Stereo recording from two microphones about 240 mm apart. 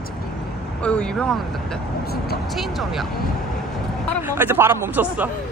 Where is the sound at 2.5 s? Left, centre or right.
Centre.